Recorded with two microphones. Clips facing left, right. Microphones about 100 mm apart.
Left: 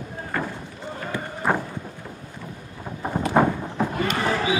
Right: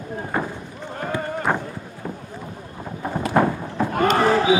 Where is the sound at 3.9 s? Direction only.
45° right (ahead or behind).